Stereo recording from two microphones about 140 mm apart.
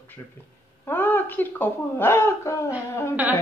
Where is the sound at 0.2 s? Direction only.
20° left (ahead or behind).